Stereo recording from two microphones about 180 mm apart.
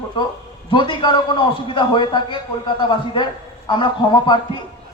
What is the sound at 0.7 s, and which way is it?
A man's voice, 25° left (ahead or behind).